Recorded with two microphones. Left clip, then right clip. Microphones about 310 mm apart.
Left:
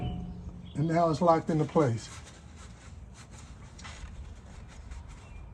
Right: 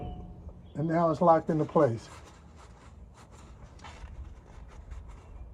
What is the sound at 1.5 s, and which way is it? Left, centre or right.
Speech, centre.